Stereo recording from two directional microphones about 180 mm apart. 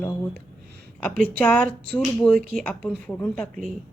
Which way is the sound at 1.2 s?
5° left (ahead or behind).